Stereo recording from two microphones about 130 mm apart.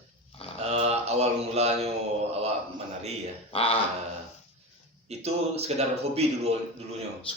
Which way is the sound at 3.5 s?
50° left (ahead or behind).